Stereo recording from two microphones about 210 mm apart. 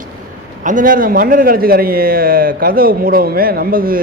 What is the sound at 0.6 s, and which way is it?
A man's voice, 40° right (ahead or behind).